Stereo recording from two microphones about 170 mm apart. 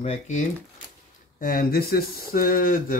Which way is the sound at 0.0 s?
40° left (ahead or behind).